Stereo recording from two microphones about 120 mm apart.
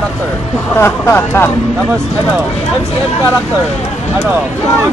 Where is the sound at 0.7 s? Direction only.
20° left (ahead or behind).